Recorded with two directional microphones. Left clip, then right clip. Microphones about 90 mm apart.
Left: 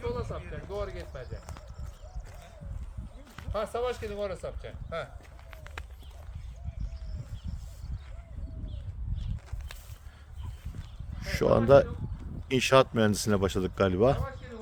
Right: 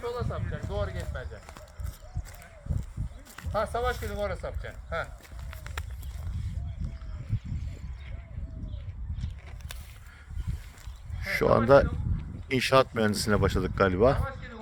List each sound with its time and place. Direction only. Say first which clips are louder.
0.0 s a sound: right 1 dB; 25° right (ahead or behind)
0.5 s clip-clop: right 1 dB; 25° right (ahead or behind)
3.5 s speech: right 2 dB; 5° right (ahead or behind)
11.2 s speech: right 2 dB; 40° left (ahead or behind)